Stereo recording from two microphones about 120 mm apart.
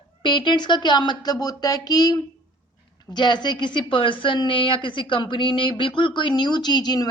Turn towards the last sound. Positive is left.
turn(degrees=35)  # may be behind; listen again after turning